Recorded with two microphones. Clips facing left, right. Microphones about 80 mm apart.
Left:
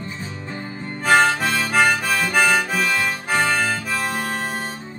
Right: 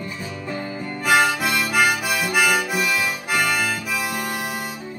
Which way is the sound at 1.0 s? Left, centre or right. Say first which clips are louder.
Left 2 dB; centre.